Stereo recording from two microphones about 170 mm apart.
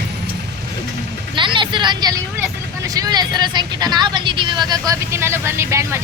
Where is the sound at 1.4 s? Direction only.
30° right (ahead or behind).